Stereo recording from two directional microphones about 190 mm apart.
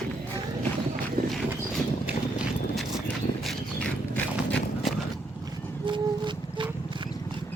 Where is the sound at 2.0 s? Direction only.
5° right (ahead or behind).